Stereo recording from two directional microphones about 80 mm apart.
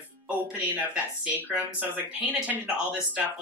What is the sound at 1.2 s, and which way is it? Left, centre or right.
Speech, right.